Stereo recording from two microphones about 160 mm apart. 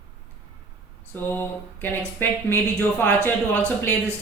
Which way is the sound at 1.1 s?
15° left (ahead or behind).